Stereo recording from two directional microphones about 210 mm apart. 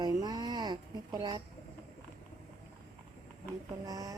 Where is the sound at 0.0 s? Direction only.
20° right (ahead or behind).